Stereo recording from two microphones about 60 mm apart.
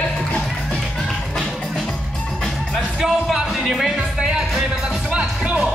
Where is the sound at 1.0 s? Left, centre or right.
Centre.